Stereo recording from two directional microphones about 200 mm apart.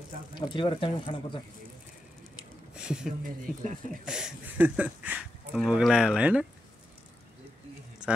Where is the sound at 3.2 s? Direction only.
40° right (ahead or behind).